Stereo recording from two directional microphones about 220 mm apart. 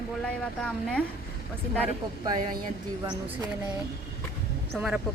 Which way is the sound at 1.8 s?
15° right (ahead or behind).